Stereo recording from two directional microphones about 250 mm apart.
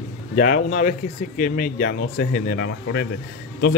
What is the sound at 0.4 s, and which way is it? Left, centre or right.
Speech, left.